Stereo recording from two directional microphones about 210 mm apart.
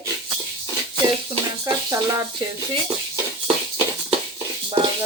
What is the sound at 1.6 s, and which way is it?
Speech, 15° right (ahead or behind).